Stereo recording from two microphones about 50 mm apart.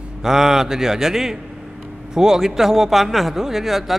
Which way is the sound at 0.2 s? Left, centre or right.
Centre.